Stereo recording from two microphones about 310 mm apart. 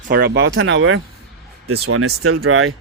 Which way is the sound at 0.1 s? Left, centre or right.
Right.